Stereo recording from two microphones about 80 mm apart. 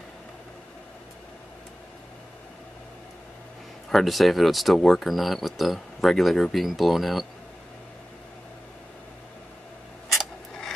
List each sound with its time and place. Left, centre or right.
3.9 s speech: centre